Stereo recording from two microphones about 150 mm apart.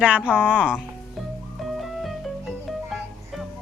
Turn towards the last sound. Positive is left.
turn(degrees=0)  # may be behind; listen again after turning